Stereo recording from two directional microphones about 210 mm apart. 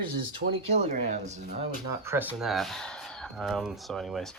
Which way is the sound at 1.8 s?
10° right (ahead or behind).